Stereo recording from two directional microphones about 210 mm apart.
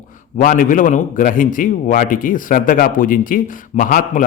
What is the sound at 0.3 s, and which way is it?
A man's voice, 40° left (ahead or behind).